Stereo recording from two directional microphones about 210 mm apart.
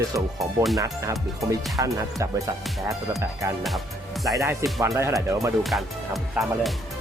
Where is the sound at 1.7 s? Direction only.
15° right (ahead or behind).